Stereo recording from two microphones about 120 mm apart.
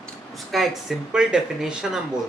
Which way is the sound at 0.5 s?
Centre (ahead or behind).